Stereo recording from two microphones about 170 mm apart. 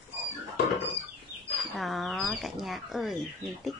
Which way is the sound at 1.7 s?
Centre (ahead or behind).